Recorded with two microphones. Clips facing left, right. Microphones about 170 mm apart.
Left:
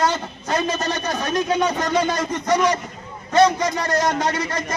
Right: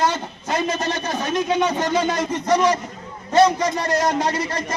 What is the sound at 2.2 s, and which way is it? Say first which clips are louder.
Speech: right 1 dB; 30° right (ahead or behind).